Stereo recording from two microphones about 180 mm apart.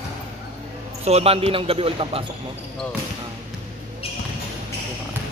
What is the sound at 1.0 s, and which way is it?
A man's voice, 35° right (ahead or behind).